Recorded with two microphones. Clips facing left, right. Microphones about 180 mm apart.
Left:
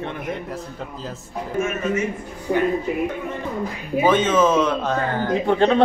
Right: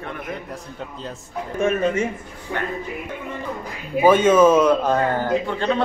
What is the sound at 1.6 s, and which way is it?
Speech, 35° right (ahead or behind).